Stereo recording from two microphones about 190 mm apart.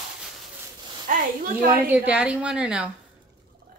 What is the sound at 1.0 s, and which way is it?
Speech, 45° right (ahead or behind).